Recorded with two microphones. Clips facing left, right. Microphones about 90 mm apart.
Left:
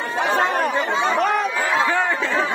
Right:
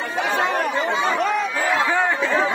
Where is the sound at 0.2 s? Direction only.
45° left (ahead or behind).